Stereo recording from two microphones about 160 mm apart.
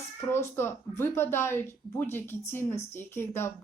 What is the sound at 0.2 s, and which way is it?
A woman's voice, 15° left (ahead or behind).